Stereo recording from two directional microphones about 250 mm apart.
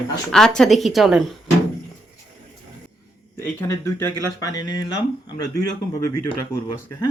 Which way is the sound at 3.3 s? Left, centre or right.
Centre.